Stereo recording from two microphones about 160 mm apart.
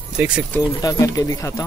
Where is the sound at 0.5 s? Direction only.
20° left (ahead or behind).